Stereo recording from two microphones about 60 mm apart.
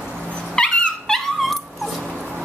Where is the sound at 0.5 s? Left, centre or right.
Centre.